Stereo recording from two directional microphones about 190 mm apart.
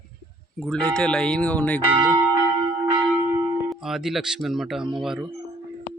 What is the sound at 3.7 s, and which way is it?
Speech, centre (ahead or behind).